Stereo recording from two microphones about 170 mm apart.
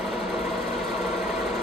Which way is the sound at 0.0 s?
Centre (ahead or behind).